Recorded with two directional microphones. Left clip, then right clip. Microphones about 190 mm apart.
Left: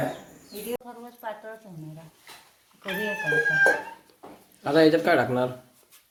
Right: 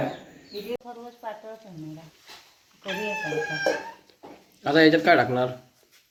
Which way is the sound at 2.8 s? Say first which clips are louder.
Left 1 dB; 10° left (ahead or behind).